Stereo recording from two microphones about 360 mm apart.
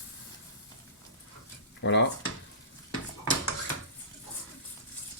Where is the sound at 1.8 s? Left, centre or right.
Left.